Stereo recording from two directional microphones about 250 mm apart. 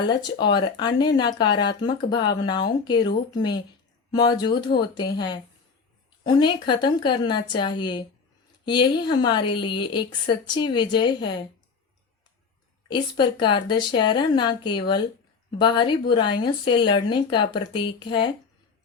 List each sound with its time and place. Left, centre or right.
0.1 s a woman's voice: centre
12.9 s a woman's voice: centre